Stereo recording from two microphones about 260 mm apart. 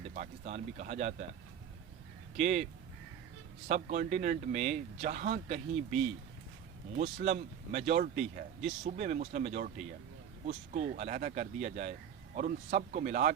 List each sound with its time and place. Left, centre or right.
0.1 s a man's voice: right
2.3 s a man's voice: right
3.7 s a man's voice: right